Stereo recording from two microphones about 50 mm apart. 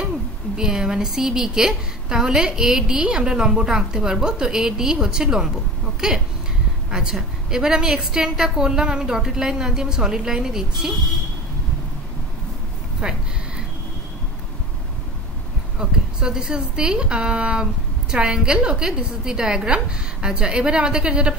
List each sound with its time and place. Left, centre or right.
0.6 s a woman's voice: centre
13.0 s a woman's voice: centre
15.8 s a woman's voice: centre